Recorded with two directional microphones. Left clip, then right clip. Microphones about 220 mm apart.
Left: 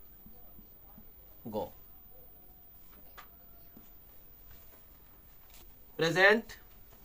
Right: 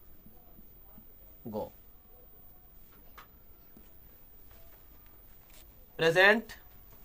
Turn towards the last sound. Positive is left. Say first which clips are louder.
# right 2 dB
turn(degrees=-45)  # may be behind; listen again after turning